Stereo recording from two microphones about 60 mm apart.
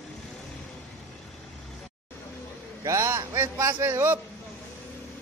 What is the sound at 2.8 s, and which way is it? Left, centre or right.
Speech, right.